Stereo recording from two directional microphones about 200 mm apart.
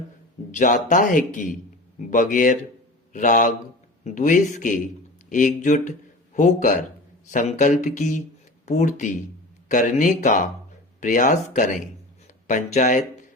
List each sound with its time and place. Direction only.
0.5 s a man's voice: 40° left (ahead or behind)